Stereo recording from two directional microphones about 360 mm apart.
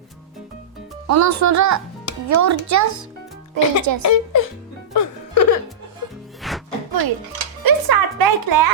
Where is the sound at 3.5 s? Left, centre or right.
Right.